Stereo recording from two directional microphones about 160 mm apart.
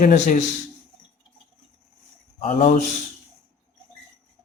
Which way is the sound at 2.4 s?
35° left (ahead or behind).